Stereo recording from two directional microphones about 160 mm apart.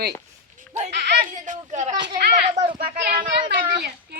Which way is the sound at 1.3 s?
50° right (ahead or behind).